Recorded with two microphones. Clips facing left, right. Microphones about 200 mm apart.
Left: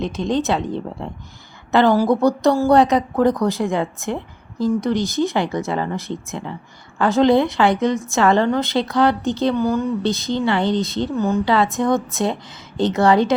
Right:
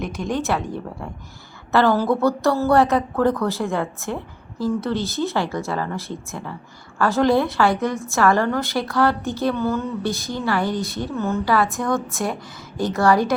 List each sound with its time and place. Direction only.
0.0 s a woman's voice: 20° left (ahead or behind)